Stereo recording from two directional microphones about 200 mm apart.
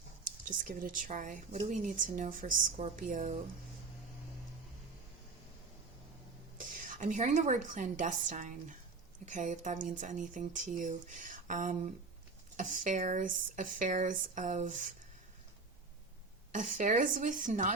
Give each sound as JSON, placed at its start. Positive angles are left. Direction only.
{"t": 0.3, "sound": "speech", "side_deg": -40}
{"t": 6.6, "sound": "speech", "side_deg": -40}
{"t": 16.5, "sound": "speech", "side_deg": -40}